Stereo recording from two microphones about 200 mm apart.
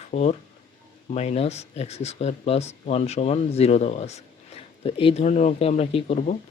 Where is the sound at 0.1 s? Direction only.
35° left (ahead or behind).